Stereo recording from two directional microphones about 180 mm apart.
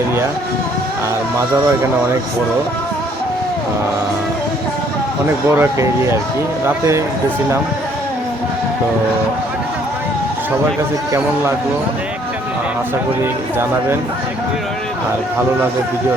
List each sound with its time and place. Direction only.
5.5 s speech: 15° right (ahead or behind)